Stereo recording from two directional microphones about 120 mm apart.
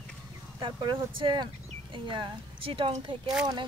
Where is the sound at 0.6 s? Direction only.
45° right (ahead or behind).